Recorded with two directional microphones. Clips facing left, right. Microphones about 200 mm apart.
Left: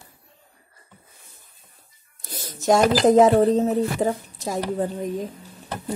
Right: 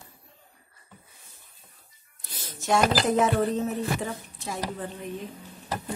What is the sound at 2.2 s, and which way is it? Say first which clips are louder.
Speech: left 9 dB; 40° left (ahead or behind).